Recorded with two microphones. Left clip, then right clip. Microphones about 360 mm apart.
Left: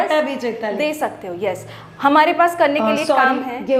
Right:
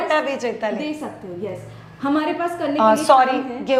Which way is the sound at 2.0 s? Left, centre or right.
Left.